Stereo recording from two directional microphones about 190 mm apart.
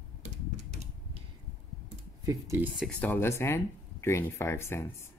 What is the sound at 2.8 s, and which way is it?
Speech, 5° left (ahead or behind).